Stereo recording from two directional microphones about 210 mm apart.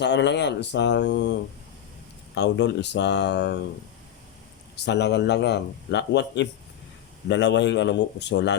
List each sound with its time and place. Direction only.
0.0 s speech: 55° left (ahead or behind)
4.9 s speech: 55° left (ahead or behind)